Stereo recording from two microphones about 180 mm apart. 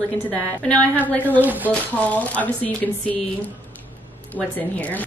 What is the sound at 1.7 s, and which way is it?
Speech, 10° left (ahead or behind).